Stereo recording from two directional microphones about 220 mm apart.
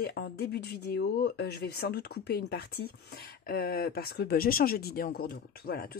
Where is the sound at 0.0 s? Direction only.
45° left (ahead or behind).